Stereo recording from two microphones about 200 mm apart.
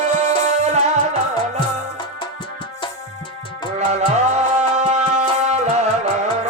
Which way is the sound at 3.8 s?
35° right (ahead or behind).